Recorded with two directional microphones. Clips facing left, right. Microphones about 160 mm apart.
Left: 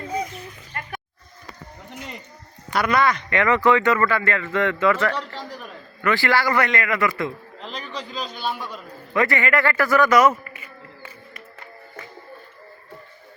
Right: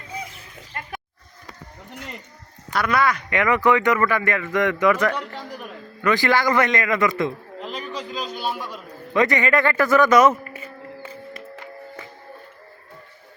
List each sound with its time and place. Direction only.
0.7 s snake: 20° right (ahead or behind)
2.7 s a man's voice: centre (ahead or behind)
3.0 s a man's voice: 10° right (ahead or behind)
7.6 s a sound: 5° right (ahead or behind)
8.4 s a man's voice: 5° right (ahead or behind)
9.1 s a man's voice: 20° right (ahead or behind)